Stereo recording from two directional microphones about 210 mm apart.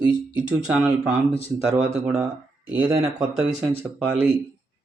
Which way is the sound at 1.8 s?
30° right (ahead or behind).